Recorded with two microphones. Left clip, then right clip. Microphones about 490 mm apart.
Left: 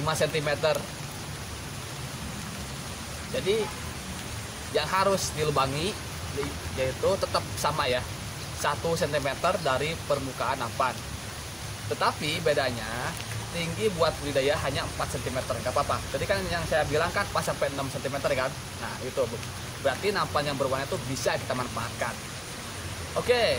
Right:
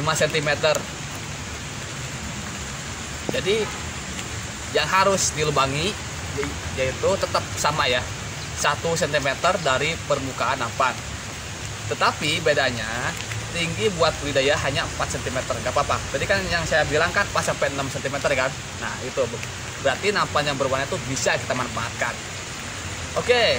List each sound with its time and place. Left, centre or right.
0.0 s speech: left
4.7 s speech: left
12.0 s speech: left
19.9 s speech: left
23.2 s speech: left